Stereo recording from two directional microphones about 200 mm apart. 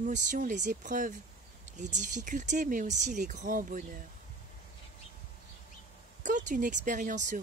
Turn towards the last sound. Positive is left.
turn(degrees=-40)  # may be behind; listen again after turning